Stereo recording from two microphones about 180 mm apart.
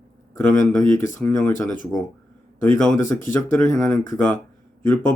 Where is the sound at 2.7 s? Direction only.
15° left (ahead or behind).